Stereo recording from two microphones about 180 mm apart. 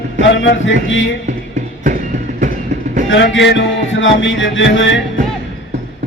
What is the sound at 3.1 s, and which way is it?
Music, 90° left.